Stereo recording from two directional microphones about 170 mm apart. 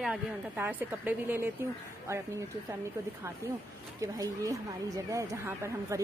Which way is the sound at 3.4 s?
15° right (ahead or behind).